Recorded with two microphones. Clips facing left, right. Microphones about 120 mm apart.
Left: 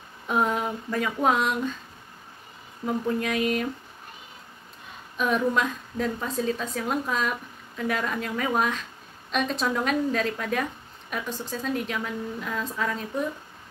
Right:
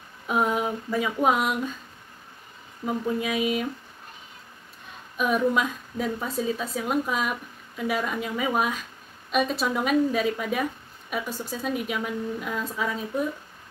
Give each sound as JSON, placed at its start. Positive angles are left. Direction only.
{"t": 0.3, "sound": "a sound", "side_deg": -5}
{"t": 2.8, "sound": "a woman's voice", "side_deg": -5}
{"t": 5.1, "sound": "a woman's voice", "side_deg": -5}